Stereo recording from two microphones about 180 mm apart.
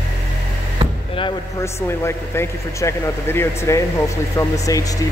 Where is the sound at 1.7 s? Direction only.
15° left (ahead or behind).